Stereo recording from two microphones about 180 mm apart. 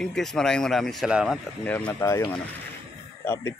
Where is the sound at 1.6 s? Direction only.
10° left (ahead or behind).